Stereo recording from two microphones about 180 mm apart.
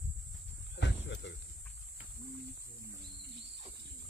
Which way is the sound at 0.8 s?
75° left (ahead or behind).